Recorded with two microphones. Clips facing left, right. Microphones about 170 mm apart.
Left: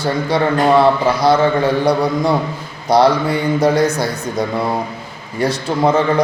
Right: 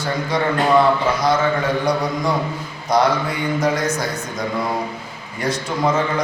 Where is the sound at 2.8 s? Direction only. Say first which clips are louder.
Left 5 dB; 30° left (ahead or behind).